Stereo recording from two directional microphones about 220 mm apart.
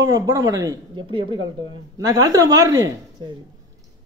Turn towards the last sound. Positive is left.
turn(degrees=-20)  # may be behind; listen again after turning